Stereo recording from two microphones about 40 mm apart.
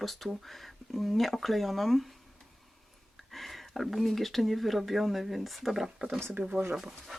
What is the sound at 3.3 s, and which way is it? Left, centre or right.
Speech, centre.